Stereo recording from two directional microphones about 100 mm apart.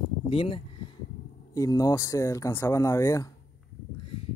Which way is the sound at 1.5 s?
35° left (ahead or behind).